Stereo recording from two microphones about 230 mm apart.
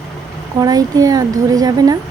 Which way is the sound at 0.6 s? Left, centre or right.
Centre.